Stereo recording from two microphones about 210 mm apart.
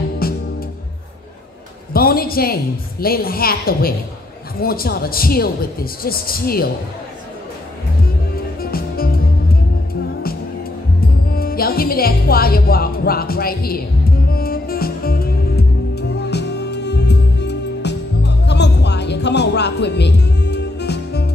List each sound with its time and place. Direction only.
0.2 s music: 45° left (ahead or behind)
2.0 s a woman's voice: 45° left (ahead or behind)
8.5 s music: 45° left (ahead or behind)
11.2 s music: 45° left (ahead or behind)